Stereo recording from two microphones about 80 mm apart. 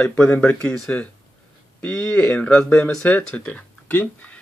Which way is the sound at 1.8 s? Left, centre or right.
Centre.